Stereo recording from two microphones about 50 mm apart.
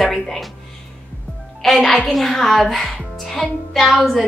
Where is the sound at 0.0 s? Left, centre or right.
Centre.